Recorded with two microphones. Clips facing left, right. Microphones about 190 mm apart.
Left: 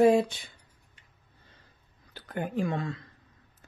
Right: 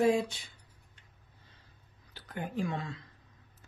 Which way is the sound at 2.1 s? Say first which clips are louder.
Left 5 dB; 55° left (ahead or behind).